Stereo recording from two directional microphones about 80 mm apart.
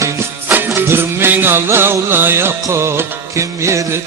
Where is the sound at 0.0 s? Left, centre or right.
Right.